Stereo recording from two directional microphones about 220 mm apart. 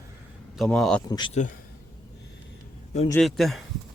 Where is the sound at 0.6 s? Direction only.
Centre (ahead or behind).